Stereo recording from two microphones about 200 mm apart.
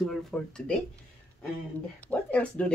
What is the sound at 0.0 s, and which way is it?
Speech, 5° left (ahead or behind).